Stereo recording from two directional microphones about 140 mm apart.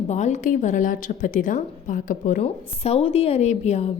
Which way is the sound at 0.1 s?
55° left (ahead or behind).